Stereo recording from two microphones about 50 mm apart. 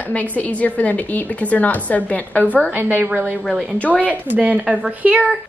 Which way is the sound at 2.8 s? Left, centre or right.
Right.